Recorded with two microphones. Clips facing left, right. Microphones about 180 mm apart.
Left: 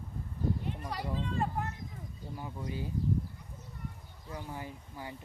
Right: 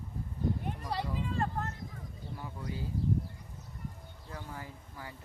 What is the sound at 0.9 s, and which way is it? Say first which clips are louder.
Speech: right 6 dB; 30° right (ahead or behind).